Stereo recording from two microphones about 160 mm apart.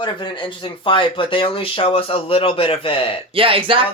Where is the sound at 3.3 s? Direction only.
35° right (ahead or behind).